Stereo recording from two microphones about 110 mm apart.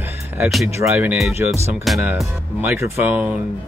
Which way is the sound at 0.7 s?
15° right (ahead or behind).